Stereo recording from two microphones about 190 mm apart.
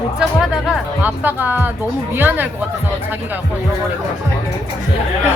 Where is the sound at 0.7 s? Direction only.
10° right (ahead or behind).